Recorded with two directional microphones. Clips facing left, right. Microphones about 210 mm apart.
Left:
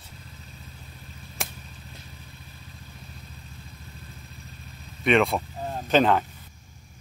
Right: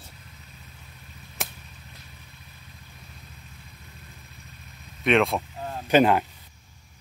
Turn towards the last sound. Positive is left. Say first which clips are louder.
# right 1 dB
turn(degrees=-10)  # may be behind; listen again after turning